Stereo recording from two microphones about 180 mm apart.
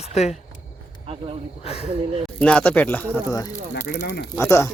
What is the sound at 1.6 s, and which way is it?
Speech, 35° left (ahead or behind).